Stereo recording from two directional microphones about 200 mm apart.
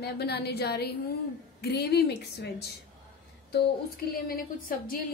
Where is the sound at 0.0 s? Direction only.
55° left (ahead or behind).